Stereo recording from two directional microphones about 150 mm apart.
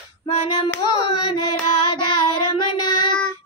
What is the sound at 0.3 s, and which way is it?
Child singing, 45° left (ahead or behind).